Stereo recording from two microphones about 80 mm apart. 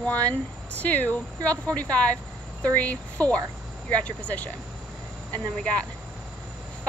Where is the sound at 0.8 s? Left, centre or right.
Centre.